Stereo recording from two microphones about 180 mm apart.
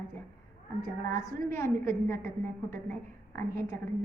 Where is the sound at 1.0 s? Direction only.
15° left (ahead or behind).